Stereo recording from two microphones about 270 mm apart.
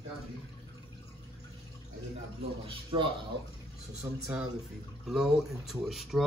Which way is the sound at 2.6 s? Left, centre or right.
Centre.